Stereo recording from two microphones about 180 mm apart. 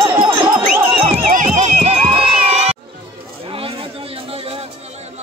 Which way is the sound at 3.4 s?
30° right (ahead or behind).